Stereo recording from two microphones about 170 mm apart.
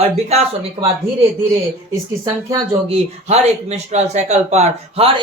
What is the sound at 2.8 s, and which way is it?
Speech, 40° right (ahead or behind).